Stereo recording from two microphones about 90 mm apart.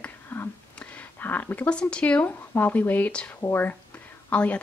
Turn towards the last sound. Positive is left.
turn(degrees=15)  # may be behind; listen again after turning